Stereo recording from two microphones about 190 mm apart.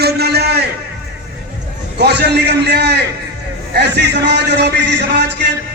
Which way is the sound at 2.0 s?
60° right (ahead or behind).